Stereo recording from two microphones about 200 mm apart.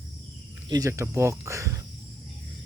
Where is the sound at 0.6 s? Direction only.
20° right (ahead or behind).